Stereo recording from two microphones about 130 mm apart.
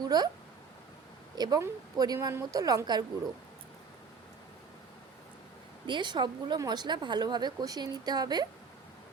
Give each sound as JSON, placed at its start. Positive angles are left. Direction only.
{"t": 0.0, "sound": "speech", "side_deg": -30}
{"t": 1.4, "sound": "a woman's voice", "side_deg": -30}
{"t": 5.8, "sound": "a woman's voice", "side_deg": -35}